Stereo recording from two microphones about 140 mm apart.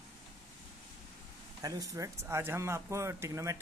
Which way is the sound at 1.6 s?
25° right (ahead or behind).